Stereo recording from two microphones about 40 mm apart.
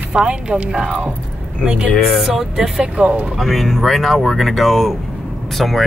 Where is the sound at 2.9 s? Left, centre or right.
Right.